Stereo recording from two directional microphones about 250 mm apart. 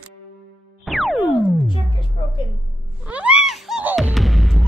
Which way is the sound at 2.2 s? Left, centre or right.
Left.